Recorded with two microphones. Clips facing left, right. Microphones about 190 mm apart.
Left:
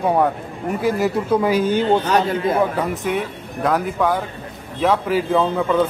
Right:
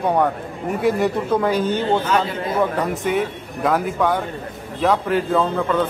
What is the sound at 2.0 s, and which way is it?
Speech, 40° left (ahead or behind).